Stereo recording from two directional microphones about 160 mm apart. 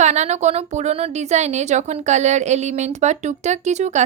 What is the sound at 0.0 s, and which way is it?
A woman's voice, 45° right (ahead or behind).